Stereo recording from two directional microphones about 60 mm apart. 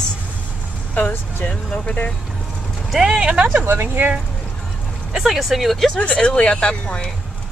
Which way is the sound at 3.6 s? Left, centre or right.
Right.